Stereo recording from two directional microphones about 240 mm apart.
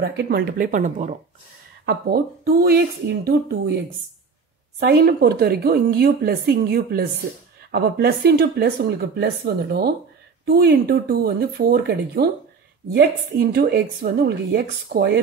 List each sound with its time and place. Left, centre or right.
0.0 s a woman's voice: right
4.7 s a woman's voice: right